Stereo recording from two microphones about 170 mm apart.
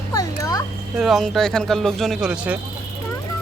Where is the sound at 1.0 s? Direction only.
Centre (ahead or behind).